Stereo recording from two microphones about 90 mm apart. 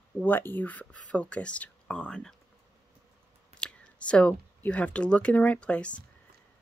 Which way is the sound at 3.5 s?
10° left (ahead or behind).